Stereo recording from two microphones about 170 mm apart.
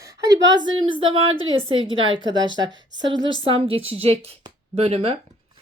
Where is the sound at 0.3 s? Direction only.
90° right.